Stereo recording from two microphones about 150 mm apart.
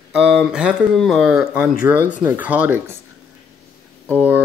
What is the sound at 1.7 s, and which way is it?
Speech, 60° left (ahead or behind).